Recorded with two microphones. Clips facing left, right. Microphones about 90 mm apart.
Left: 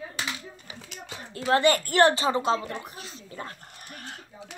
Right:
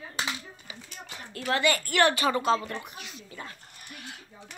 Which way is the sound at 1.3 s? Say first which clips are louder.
Left 5 dB; 20° left (ahead or behind).